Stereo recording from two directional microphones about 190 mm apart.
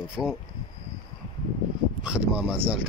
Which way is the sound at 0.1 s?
Centre (ahead or behind).